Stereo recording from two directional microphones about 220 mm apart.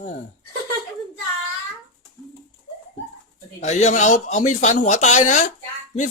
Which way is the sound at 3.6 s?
30° left (ahead or behind).